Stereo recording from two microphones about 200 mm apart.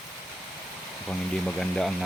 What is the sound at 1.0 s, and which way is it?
Speech, centre (ahead or behind).